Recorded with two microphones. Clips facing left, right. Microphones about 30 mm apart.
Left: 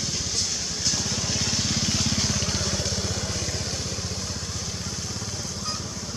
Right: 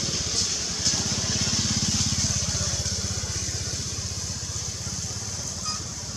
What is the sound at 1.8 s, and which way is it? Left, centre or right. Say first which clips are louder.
Vehicle: left 2 dB; left.